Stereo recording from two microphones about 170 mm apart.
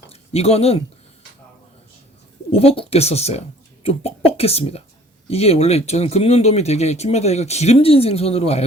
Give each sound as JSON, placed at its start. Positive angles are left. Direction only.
{"t": 0.1, "sound": "speech", "side_deg": 35}
{"t": 2.5, "sound": "speech", "side_deg": 35}